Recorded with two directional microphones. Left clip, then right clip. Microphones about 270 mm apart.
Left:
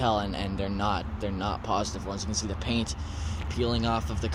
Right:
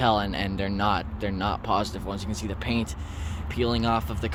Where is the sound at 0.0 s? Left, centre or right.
Centre.